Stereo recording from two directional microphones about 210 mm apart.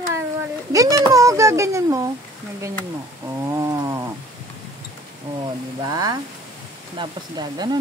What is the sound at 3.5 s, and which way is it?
Wild animals, 15° right (ahead or behind).